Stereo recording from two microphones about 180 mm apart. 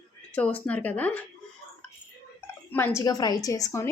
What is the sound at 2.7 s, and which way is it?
A woman's voice, 15° left (ahead or behind).